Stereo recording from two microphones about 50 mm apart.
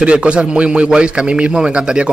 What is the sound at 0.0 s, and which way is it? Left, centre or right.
A man's voice, right.